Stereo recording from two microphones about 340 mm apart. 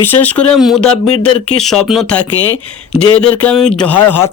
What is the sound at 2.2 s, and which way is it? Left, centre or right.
Speech, left.